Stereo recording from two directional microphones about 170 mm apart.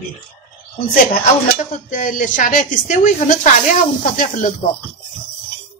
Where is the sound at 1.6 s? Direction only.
45° left (ahead or behind).